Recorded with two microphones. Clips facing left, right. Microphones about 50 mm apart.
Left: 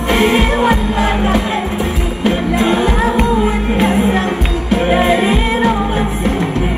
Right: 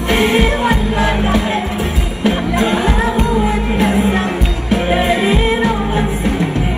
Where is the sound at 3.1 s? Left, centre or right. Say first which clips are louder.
Left 1 dB; left.